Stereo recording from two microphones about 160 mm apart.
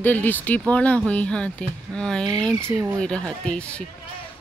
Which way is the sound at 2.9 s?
5° left (ahead or behind).